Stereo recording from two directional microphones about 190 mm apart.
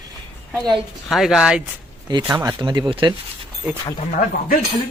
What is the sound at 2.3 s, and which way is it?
Speech, 20° right (ahead or behind).